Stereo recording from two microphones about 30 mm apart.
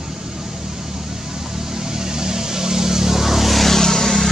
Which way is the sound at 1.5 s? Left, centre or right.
Centre.